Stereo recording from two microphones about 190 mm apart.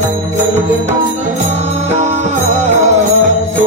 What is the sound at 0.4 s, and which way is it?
Music, 40° right (ahead or behind).